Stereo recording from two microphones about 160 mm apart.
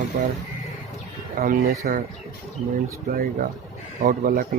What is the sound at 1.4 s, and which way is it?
Speech, 65° right (ahead or behind).